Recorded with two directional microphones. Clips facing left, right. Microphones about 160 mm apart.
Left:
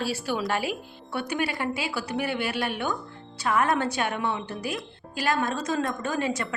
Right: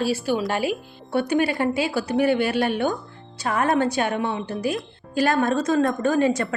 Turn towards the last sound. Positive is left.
turn(degrees=-40)  # may be behind; listen again after turning